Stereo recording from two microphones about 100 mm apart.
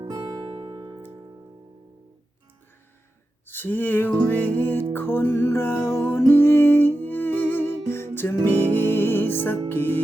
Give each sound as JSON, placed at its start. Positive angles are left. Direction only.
{"t": 0.0, "sound": "music", "side_deg": -40}
{"t": 3.4, "sound": "music", "side_deg": 20}